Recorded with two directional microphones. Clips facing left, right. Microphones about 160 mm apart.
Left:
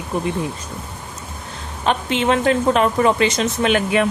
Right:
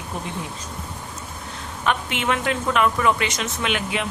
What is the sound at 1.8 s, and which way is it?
Speech, 30° left (ahead or behind).